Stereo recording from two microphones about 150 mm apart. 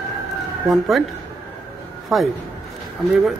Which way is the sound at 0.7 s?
Centre (ahead or behind).